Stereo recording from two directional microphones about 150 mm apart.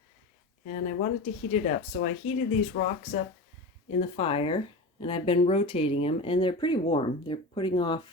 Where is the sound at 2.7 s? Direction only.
90° left.